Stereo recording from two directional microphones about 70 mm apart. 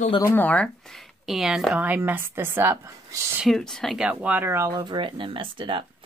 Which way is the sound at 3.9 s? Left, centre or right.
Centre.